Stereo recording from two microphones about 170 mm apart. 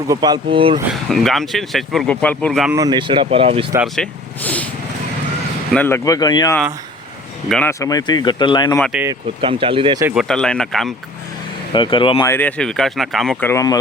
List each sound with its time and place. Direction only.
0.1 s speech: 25° right (ahead or behind)
0.9 s speech: centre (ahead or behind)
2.7 s speech: 25° right (ahead or behind)
3.9 s speech: 5° left (ahead or behind)
5.7 s speech: 10° left (ahead or behind)
7.7 s speech: 20° left (ahead or behind)
8.8 s speech: 5° right (ahead or behind)
9.4 s speech: 30° right (ahead or behind)
10.2 s speech: 5° left (ahead or behind)
11.7 s speech: 30° left (ahead or behind)
12.2 s speech: 10° left (ahead or behind)
13.4 s speech: 15° left (ahead or behind)